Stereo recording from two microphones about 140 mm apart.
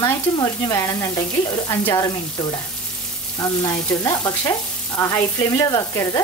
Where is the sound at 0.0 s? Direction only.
20° left (ahead or behind).